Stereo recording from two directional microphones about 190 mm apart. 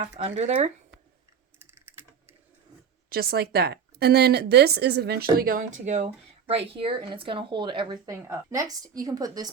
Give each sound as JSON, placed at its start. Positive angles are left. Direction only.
{"t": 0.0, "sound": "a woman's voice", "side_deg": -35}
{"t": 1.5, "sound": "typing", "side_deg": -10}
{"t": 3.1, "sound": "a woman's voice", "side_deg": -55}